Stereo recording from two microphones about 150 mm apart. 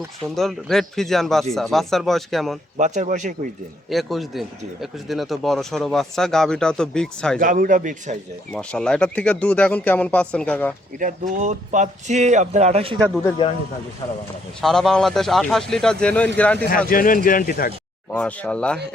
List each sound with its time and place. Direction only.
0.3 s speech: centre (ahead or behind)
2.7 s a man's voice: 55° right (ahead or behind)
3.8 s speech: centre (ahead or behind)
7.3 s a man's voice: 65° right (ahead or behind)
8.5 s speech: 5° left (ahead or behind)
10.9 s speech: 60° right (ahead or behind); by 13.0 s 40° right (ahead or behind)
14.6 s speech: 5° left (ahead or behind)
16.6 s speech: 70° left (ahead or behind)
18.1 s speech: 10° left (ahead or behind)